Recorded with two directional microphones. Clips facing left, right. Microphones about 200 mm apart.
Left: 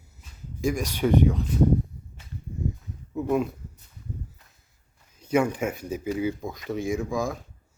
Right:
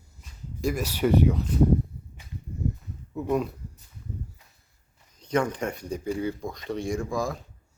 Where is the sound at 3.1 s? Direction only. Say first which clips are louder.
Left 2 dB; centre (ahead or behind).